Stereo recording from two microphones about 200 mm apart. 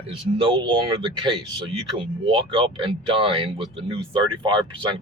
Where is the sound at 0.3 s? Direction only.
25° right (ahead or behind).